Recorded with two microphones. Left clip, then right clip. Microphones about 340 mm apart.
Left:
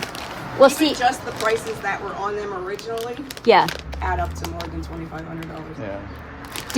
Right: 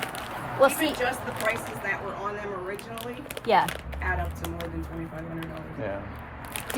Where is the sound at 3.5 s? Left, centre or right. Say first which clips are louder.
Left 8 dB; left.